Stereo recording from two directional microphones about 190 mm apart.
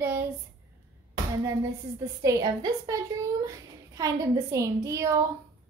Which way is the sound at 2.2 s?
20° right (ahead or behind).